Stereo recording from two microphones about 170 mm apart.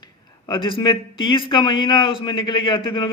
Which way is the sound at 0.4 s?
25° left (ahead or behind).